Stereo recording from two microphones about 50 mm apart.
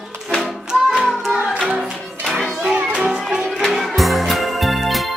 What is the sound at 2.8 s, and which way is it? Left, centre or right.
Music, right.